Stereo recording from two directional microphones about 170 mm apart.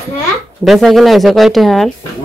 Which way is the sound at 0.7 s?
Centre (ahead or behind).